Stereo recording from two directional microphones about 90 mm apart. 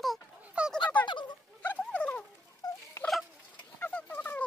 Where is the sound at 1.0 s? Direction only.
55° left (ahead or behind).